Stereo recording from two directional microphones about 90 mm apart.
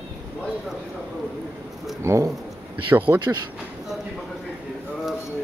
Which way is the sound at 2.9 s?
20° right (ahead or behind).